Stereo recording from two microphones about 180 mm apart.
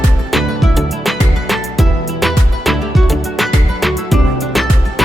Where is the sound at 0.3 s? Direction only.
Centre (ahead or behind).